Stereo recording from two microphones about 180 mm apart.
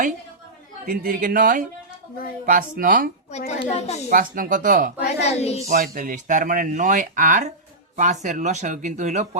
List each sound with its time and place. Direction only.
0.9 s speech: 50° right (ahead or behind)
3.3 s a child's voice: 40° left (ahead or behind)
4.1 s speech: 50° right (ahead or behind)
5.2 s a child's voice: 35° left (ahead or behind)
5.6 s speech: 50° right (ahead or behind)